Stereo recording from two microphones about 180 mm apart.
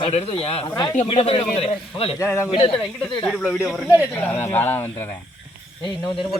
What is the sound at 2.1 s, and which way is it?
Speech, 15° left (ahead or behind).